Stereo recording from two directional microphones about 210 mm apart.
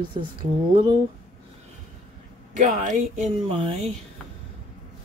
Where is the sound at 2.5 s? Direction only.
35° right (ahead or behind).